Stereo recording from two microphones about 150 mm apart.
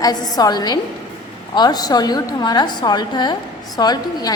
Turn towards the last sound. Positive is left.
turn(degrees=25)  # may be behind; listen again after turning